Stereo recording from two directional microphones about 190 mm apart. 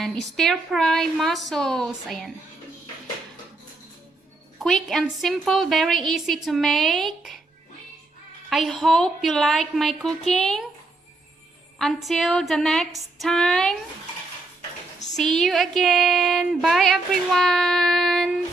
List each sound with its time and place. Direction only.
0.0 s speech: centre (ahead or behind)
4.6 s speech: centre (ahead or behind)
8.4 s speech: centre (ahead or behind)
11.8 s speech: centre (ahead or behind)
15.1 s speech: centre (ahead or behind)